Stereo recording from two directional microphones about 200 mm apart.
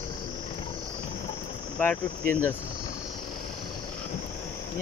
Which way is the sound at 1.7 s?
10° left (ahead or behind).